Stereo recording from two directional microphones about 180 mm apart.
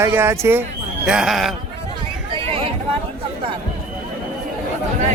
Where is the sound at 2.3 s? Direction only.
30° right (ahead or behind).